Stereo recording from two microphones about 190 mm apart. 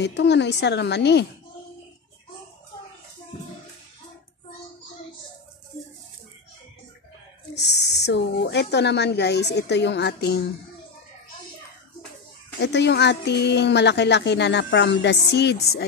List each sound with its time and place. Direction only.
0.0 s speech: 65° left (ahead or behind)
7.5 s speech: 60° left (ahead or behind)
12.5 s speech: 65° left (ahead or behind)